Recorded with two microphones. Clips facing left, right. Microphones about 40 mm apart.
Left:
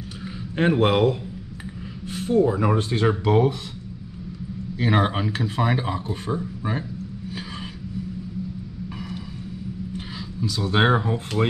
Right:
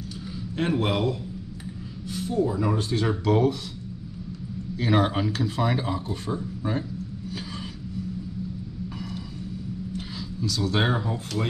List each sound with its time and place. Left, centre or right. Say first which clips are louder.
0.6 s speech: left 6 dB; left
4.7 s speech: left 1 dB; centre
9.9 s speech: left 1 dB; centre